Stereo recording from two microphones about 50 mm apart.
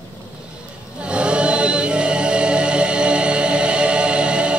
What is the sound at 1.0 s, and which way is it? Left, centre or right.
Chant, right.